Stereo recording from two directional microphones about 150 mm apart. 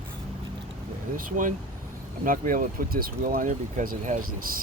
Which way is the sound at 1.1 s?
60° right (ahead or behind).